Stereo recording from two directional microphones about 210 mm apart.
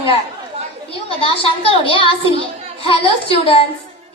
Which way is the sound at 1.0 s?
25° left (ahead or behind).